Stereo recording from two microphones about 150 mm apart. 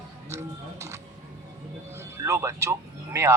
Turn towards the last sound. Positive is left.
turn(degrees=-20)  # may be behind; listen again after turning